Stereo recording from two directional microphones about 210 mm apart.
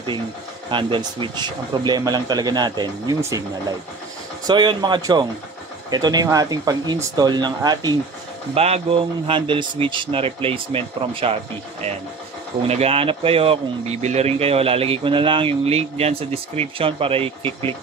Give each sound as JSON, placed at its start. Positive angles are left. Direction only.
{"t": 0.7, "sound": "speech", "side_deg": -25}
{"t": 8.5, "sound": "speech", "side_deg": -30}
{"t": 12.6, "sound": "speech", "side_deg": -30}